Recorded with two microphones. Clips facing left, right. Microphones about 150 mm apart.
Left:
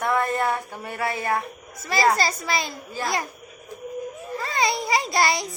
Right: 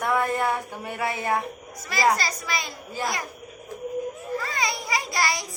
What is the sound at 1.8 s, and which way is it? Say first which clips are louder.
Speech: left 2 dB; 25° left (ahead or behind).